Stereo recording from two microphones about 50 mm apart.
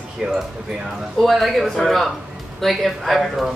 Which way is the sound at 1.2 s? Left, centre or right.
Centre.